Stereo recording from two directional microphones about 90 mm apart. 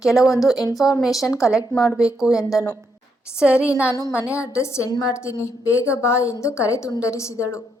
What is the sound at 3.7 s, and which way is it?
A woman's voice, 30° left (ahead or behind).